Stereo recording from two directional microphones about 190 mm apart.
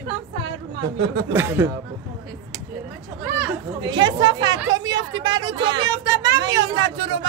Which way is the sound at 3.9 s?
20° right (ahead or behind).